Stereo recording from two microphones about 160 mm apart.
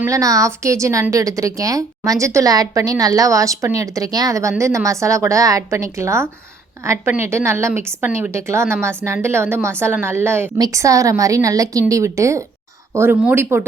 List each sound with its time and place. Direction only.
0.0 s a woman's voice: 20° right (ahead or behind)